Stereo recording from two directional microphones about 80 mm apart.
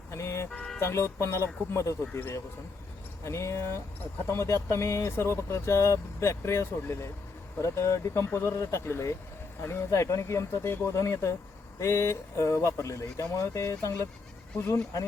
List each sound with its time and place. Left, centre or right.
0.1 s music: left
0.8 s speech: left
3.2 s speech: left